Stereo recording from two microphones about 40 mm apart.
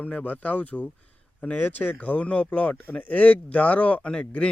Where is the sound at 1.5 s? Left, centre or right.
Left.